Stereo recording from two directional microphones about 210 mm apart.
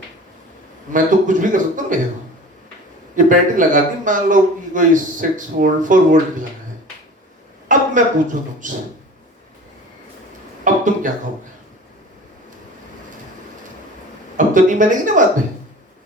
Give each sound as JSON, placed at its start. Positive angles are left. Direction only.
{"t": 0.9, "sound": "a man's voice", "side_deg": -40}
{"t": 3.2, "sound": "a man's voice", "side_deg": -40}
{"t": 7.7, "sound": "a woman's voice", "side_deg": -40}
{"t": 10.6, "sound": "a sound", "side_deg": -40}
{"t": 14.3, "sound": "speech", "side_deg": -40}